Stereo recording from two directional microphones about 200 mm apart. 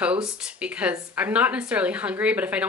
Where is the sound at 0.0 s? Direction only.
5° right (ahead or behind).